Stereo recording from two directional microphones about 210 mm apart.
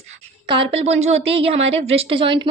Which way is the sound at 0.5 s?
25° right (ahead or behind).